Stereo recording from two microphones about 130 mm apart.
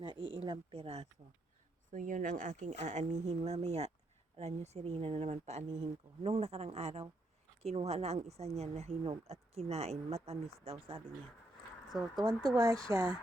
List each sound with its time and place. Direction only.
0.0 s speech: 40° right (ahead or behind)
1.9 s speech: 85° right; by 11.0 s 45° right (ahead or behind)
12.1 s speech: 30° right (ahead or behind)